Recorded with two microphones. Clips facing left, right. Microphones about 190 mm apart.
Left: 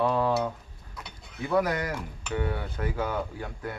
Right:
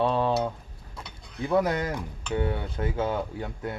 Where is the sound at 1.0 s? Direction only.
25° right (ahead or behind).